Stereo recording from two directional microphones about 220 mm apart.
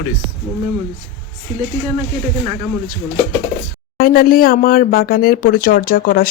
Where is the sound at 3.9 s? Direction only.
40° left (ahead or behind).